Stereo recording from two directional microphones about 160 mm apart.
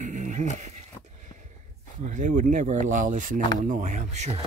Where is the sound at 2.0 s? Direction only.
50° right (ahead or behind).